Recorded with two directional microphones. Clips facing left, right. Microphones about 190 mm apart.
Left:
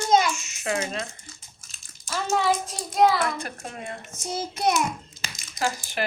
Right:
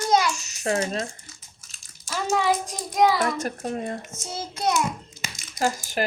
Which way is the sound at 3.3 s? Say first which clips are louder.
Right 7 dB; 40° right (ahead or behind).